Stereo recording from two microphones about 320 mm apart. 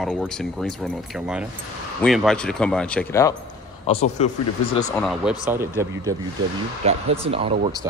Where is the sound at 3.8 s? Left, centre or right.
Centre.